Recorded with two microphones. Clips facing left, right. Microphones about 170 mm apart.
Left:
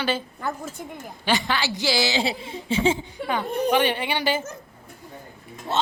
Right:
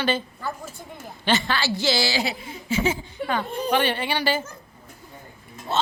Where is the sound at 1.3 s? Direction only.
15° left (ahead or behind).